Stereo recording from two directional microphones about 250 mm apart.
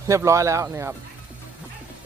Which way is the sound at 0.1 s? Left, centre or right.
Centre.